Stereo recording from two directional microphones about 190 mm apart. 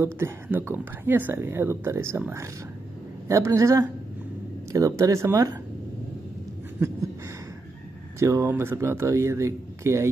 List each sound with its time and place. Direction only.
0.0 s speech: 10° right (ahead or behind)
8.2 s speech: 15° right (ahead or behind)